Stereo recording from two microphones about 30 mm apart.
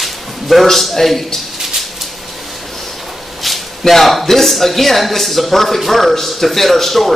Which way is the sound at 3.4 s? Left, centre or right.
Centre.